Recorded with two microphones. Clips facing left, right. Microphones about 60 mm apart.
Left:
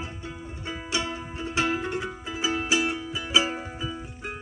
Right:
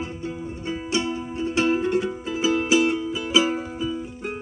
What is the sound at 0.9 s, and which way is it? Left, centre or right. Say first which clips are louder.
Music: right 4 dB; centre.